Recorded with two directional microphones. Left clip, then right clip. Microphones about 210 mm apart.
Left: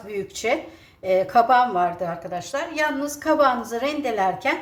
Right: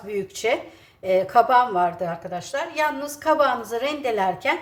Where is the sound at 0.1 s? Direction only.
5° right (ahead or behind).